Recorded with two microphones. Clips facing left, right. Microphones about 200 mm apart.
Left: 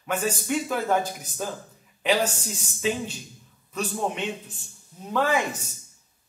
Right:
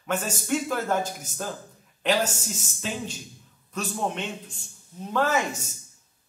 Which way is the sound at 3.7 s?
5° left (ahead or behind).